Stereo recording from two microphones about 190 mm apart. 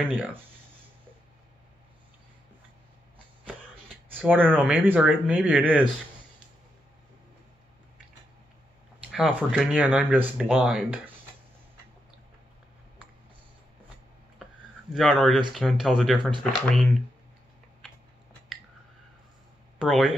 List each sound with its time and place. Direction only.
0.0 s speech: 10° right (ahead or behind)
3.4 s speech: 10° right (ahead or behind)
9.0 s speech: 5° right (ahead or behind)
14.4 s a sound: centre (ahead or behind)
15.5 s speech: centre (ahead or behind)
19.8 s speech: centre (ahead or behind)